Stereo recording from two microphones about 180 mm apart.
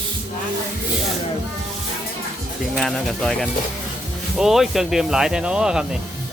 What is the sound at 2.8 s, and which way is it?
Speech, centre (ahead or behind).